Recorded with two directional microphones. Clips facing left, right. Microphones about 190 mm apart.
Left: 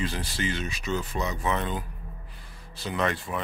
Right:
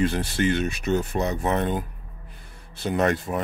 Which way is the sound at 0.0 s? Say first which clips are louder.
Right 8 dB; 55° right (ahead or behind).